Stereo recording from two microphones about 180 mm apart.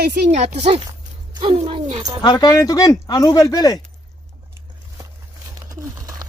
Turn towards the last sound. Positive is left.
turn(degrees=-20)  # may be behind; listen again after turning